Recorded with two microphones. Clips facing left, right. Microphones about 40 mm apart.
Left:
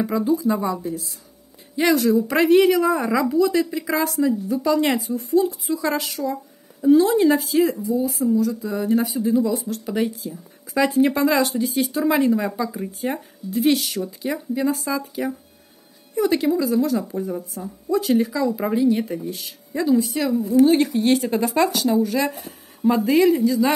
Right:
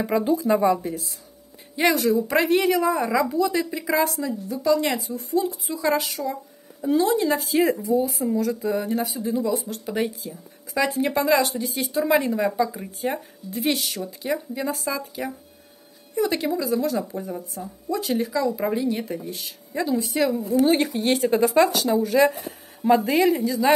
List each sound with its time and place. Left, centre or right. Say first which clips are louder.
0.2 s speech: left 2 dB; right
0.5 s speech: right 3 dB; right
1.8 s a woman's voice: left 2 dB; centre
4.2 s a woman's voice: left 6 dB; centre
7.5 s speech: right 1 dB; centre
7.9 s speech: right 1 dB; right
8.3 s speech: left 3 dB; right
8.8 s a woman's voice: left 5 dB; centre
10.7 s a woman's voice: left 4 dB; centre